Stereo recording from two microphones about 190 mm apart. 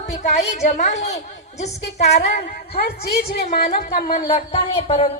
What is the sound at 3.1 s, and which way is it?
A woman's voice, 55° left (ahead or behind).